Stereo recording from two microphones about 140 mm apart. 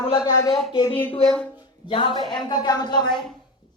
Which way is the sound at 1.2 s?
5° left (ahead or behind).